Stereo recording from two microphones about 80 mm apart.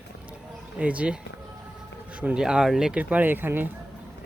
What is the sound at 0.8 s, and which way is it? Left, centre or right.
Speech, centre.